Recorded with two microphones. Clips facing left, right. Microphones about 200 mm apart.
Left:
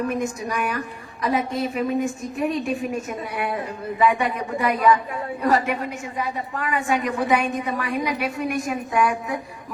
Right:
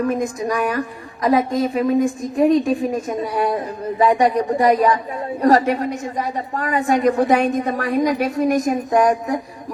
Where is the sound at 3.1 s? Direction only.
40° right (ahead or behind).